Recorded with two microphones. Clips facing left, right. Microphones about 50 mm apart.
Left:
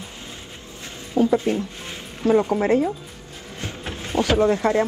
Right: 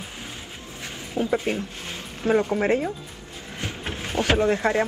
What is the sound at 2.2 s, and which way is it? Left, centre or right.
Speech, right.